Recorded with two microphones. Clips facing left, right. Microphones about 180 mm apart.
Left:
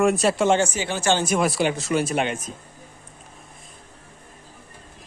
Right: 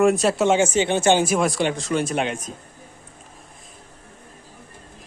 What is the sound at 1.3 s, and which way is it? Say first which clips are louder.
Speech: even; centre (ahead or behind).